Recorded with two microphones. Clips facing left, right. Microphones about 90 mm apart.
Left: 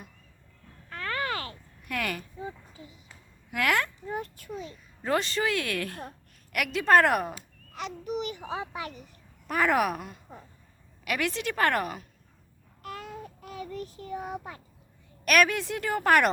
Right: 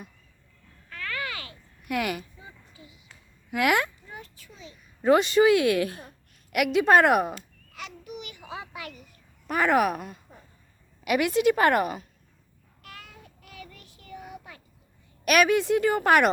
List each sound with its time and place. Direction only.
0.9 s a sound: 35° left (ahead or behind)
1.9 s a woman's voice: 10° right (ahead or behind)
2.4 s a sound: 40° left (ahead or behind)
3.5 s a woman's voice: 10° right (ahead or behind)
4.1 s a child's voice: 50° left (ahead or behind)
5.0 s a woman's voice: 10° right (ahead or behind)
7.7 s babbling: 35° left (ahead or behind)
8.5 s a child's voice: 30° left (ahead or behind)
9.5 s a woman's voice: centre (ahead or behind)
12.8 s child singing: 40° left (ahead or behind)
15.2 s a woman's voice: 5° right (ahead or behind)